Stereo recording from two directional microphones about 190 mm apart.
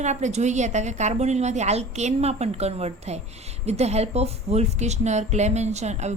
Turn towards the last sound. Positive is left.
turn(degrees=-35)  # may be behind; listen again after turning